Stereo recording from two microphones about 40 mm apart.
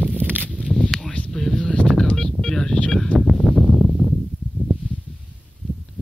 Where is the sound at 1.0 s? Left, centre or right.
Left.